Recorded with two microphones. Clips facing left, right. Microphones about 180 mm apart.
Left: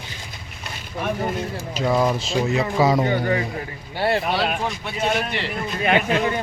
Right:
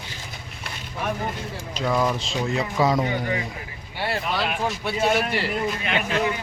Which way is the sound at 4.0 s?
35° left (ahead or behind).